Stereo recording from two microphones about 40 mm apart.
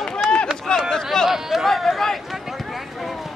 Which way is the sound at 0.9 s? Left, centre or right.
Centre.